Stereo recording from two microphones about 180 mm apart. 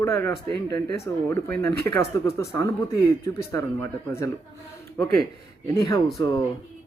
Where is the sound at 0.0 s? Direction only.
15° left (ahead or behind).